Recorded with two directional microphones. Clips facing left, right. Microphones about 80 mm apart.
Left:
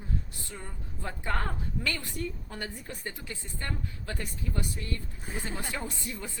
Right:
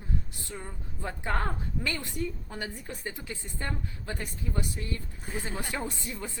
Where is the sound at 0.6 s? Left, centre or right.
Centre.